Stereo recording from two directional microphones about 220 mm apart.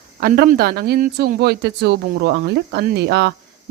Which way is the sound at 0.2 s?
45° right (ahead or behind).